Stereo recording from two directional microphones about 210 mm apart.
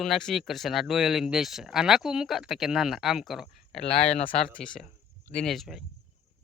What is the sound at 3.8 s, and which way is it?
Speech, 30° left (ahead or behind).